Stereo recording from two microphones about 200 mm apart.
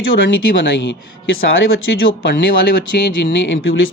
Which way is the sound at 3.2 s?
65° left (ahead or behind).